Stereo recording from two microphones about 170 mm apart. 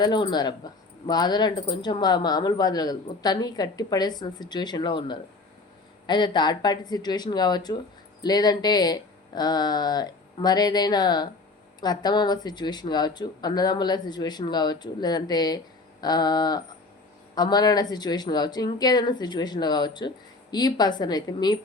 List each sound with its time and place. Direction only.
0.0 s speech: 25° left (ahead or behind)